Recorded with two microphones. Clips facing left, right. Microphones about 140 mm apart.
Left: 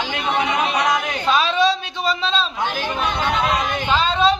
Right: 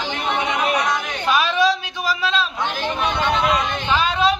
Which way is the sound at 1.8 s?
25° left (ahead or behind).